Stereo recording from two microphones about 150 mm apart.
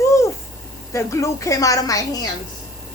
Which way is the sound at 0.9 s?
20° left (ahead or behind).